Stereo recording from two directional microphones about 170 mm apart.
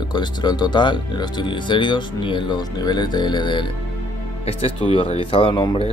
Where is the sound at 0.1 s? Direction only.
25° left (ahead or behind).